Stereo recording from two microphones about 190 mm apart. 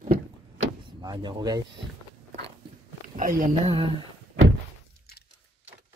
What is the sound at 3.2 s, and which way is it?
Speech, 45° right (ahead or behind).